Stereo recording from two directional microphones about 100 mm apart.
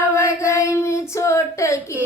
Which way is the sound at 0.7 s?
30° left (ahead or behind).